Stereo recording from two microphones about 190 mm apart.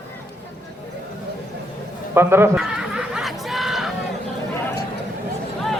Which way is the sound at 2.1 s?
10° right (ahead or behind).